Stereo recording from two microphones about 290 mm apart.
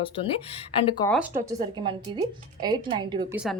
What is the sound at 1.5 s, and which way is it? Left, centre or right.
A woman's voice, centre.